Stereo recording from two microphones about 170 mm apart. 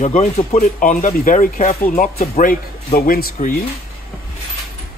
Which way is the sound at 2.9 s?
60° left (ahead or behind).